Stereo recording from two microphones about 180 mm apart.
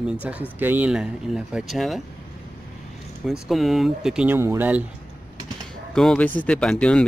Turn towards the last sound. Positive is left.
turn(degrees=5)  # may be behind; listen again after turning